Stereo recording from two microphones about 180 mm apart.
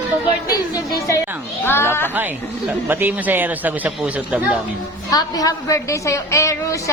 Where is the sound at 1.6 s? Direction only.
15° left (ahead or behind).